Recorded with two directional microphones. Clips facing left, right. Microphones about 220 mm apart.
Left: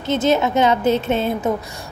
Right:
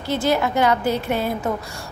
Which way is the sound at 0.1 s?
20° left (ahead or behind).